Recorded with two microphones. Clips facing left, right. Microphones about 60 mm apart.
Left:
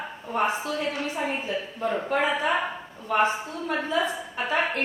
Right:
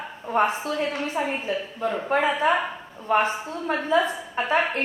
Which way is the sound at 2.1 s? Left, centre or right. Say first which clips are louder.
Right 4 dB; right.